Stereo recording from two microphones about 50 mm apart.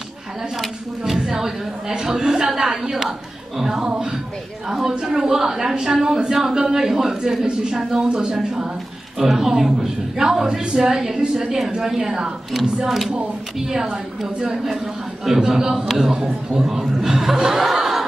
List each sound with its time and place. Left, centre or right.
0.6 s speech: centre
9.2 s speech: centre
17.4 s chuckle: centre